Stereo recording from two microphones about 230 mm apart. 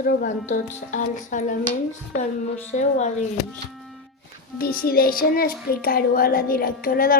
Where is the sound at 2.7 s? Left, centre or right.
Left.